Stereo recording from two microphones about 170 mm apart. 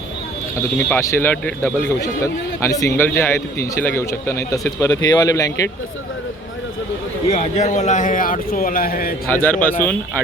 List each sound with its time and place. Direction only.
0.6 s a man's voice: 15° left (ahead or behind)
7.3 s a man's voice: 40° left (ahead or behind); by 9.1 s 60° left (ahead or behind)
9.3 s a man's voice: 10° left (ahead or behind)